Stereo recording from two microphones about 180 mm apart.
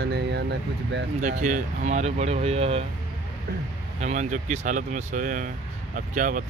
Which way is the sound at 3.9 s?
40° right (ahead or behind).